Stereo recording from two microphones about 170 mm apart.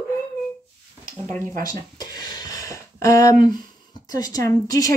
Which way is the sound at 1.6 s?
25° left (ahead or behind).